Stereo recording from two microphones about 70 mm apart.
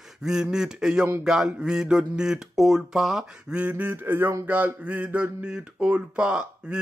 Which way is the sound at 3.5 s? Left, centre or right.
Right.